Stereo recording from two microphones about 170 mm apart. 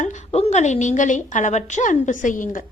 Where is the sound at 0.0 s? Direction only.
45° left (ahead or behind).